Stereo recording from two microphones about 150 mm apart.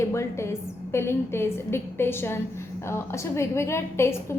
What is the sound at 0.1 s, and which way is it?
A woman's voice, 20° left (ahead or behind).